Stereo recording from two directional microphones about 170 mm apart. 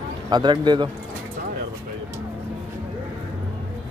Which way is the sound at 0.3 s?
25° right (ahead or behind).